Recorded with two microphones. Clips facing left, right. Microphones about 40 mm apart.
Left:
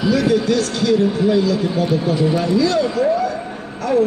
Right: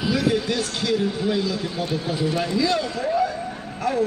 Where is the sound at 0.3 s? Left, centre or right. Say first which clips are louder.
Left 7 dB; centre.